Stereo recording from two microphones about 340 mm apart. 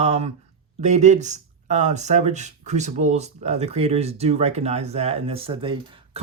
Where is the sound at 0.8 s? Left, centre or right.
Centre.